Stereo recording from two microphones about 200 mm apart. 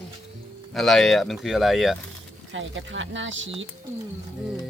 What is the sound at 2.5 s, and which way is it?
Speech, 70° right (ahead or behind).